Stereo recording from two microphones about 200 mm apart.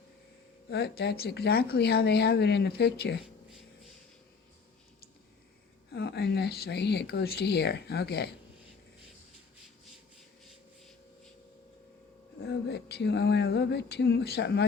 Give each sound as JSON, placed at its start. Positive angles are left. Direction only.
{"t": 0.7, "sound": "speech", "side_deg": 55}
{"t": 5.9, "sound": "speech", "side_deg": 55}
{"t": 12.4, "sound": "speech", "side_deg": 55}